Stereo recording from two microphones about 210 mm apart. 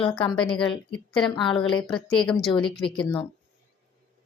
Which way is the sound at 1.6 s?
5° left (ahead or behind).